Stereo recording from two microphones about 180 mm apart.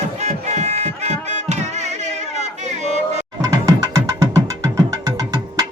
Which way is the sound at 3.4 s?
20° right (ahead or behind).